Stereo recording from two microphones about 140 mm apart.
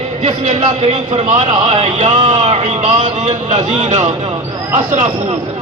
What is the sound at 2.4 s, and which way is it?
A man's voice, 55° right (ahead or behind).